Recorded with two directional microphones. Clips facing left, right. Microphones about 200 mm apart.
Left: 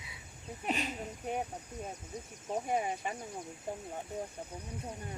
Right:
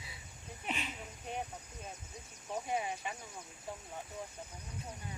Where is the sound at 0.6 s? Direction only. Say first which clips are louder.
Left 6 dB; 40° left (ahead or behind).